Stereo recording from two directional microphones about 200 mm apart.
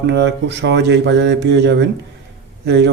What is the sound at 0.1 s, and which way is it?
Speech, 60° right (ahead or behind).